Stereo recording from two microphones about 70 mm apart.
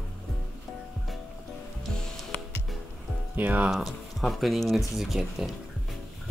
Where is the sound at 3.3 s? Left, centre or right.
Right.